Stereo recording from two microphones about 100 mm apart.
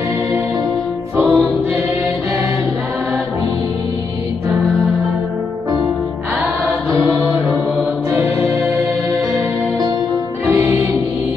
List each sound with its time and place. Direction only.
1.1 s music: 25° right (ahead or behind)
8.1 s music: 20° right (ahead or behind)
10.4 s music: 20° right (ahead or behind)